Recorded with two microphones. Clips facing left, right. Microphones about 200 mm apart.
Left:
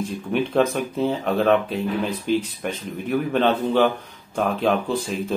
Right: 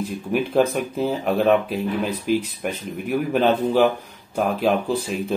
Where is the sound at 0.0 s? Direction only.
5° right (ahead or behind).